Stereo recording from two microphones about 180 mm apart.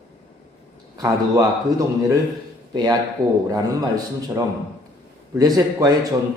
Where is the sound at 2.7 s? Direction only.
20° right (ahead or behind).